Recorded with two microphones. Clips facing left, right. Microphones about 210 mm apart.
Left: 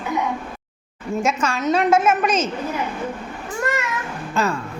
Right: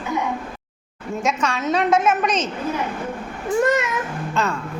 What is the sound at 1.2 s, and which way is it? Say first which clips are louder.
A woman's voice: even; centre (ahead or behind).